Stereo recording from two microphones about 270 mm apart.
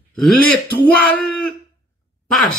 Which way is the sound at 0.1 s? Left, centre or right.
Centre.